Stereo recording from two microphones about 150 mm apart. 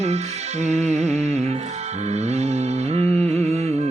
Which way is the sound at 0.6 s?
50° right (ahead or behind).